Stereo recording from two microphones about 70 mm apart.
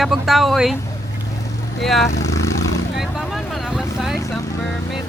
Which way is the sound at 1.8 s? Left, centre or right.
Centre.